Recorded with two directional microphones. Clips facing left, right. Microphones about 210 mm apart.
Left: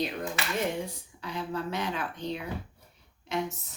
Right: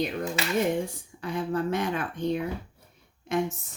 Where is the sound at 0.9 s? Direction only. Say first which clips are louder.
Right 5 dB; 50° right (ahead or behind).